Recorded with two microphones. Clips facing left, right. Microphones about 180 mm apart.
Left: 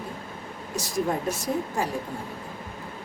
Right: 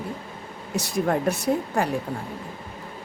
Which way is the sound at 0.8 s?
65° right (ahead or behind).